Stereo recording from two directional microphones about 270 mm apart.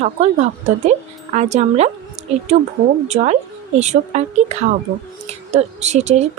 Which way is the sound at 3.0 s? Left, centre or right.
Right.